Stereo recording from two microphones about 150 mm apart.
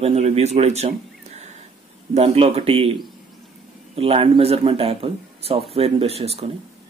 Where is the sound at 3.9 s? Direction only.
40° right (ahead or behind).